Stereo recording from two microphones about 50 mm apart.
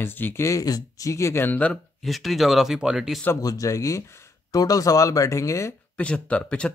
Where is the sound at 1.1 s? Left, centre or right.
Left.